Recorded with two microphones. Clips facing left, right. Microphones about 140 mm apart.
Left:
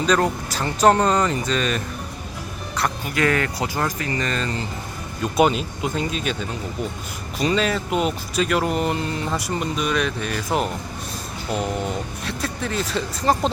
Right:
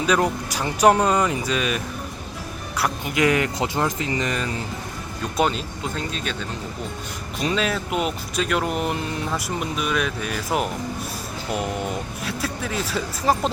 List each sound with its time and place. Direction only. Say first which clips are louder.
0.0 s speech: left 1 dB; 10° right (ahead or behind)
3.0 s speech: right 2 dB; 20° right (ahead or behind)
5.4 s speech: left 4 dB; 5° left (ahead or behind)
7.3 s speech: left 3 dB; centre (ahead or behind)